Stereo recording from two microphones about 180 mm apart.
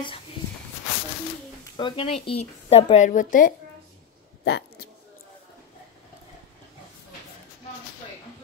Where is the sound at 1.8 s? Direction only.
25° left (ahead or behind); by 3.5 s 50° left (ahead or behind).